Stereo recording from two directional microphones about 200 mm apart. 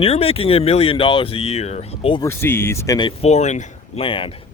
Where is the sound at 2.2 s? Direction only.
10° left (ahead or behind).